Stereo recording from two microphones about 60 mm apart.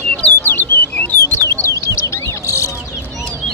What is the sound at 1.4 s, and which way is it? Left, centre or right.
Bird, left.